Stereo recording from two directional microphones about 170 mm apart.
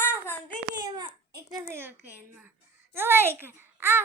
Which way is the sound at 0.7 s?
25° right (ahead or behind).